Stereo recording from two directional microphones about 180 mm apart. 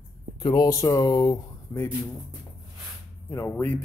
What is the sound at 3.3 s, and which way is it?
Speech, 15° left (ahead or behind).